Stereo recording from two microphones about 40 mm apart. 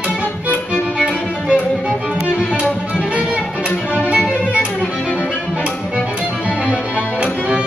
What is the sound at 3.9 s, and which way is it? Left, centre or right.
Music, right.